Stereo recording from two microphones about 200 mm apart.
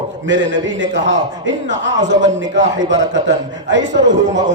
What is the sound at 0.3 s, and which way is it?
A man's voice, 65° right (ahead or behind).